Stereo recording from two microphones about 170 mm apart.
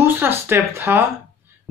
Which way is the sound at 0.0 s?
15° right (ahead or behind).